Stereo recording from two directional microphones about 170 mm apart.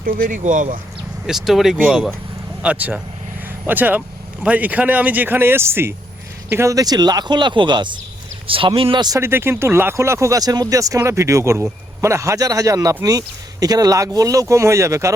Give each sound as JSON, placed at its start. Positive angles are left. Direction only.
{"t": 0.0, "sound": "speech", "side_deg": -55}
{"t": 1.3, "sound": "speech", "side_deg": 0}